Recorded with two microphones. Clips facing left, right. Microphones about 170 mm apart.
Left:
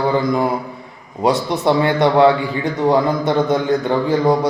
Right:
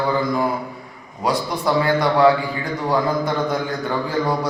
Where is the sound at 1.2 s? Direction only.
25° left (ahead or behind).